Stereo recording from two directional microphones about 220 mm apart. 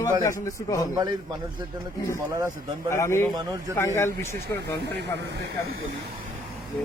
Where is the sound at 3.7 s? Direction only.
10° left (ahead or behind).